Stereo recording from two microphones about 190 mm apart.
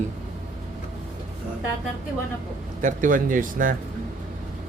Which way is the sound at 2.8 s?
45° right (ahead or behind).